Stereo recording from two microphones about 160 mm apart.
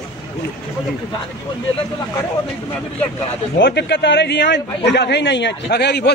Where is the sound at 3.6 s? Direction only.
90° left.